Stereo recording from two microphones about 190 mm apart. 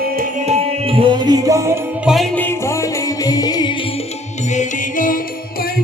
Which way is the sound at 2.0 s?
Centre (ahead or behind).